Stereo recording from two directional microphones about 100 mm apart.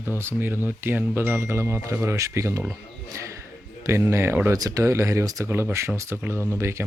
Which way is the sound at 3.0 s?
30° right (ahead or behind).